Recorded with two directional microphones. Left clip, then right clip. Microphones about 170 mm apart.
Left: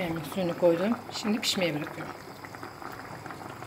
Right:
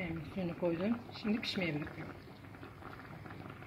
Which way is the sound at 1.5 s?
90° left.